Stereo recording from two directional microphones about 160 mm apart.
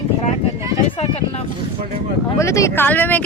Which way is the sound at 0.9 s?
35° left (ahead or behind).